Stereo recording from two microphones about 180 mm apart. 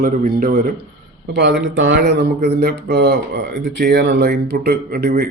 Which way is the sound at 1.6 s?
90° right.